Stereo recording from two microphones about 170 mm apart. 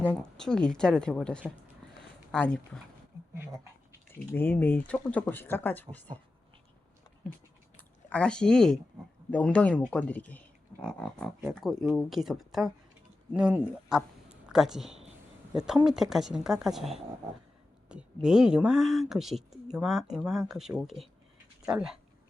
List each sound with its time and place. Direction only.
0.1 s speech: 5° left (ahead or behind)
3.3 s speech: 15° right (ahead or behind)
4.1 s speech: 10° left (ahead or behind)
8.1 s speech: 5° left (ahead or behind)